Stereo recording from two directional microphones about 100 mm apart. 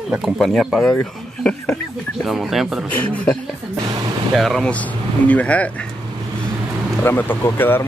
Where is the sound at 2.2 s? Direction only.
Centre (ahead or behind).